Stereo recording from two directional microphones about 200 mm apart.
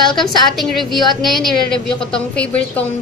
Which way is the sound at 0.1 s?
Centre (ahead or behind).